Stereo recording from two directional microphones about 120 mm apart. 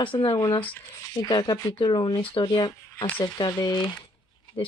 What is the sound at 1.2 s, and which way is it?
Speech, 35° left (ahead or behind).